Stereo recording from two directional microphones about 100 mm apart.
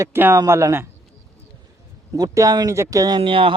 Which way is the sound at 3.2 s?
65° right (ahead or behind).